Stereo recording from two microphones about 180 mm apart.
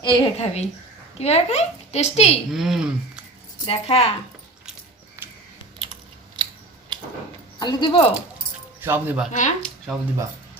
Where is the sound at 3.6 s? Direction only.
35° left (ahead or behind).